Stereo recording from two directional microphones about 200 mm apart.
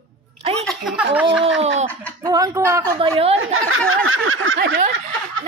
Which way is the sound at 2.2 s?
20° right (ahead or behind).